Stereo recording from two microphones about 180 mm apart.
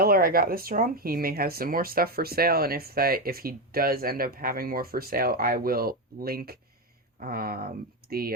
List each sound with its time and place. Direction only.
0.0 s speech: 55° right (ahead or behind)